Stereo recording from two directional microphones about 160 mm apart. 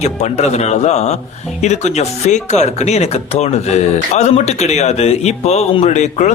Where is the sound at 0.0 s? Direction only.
45° left (ahead or behind).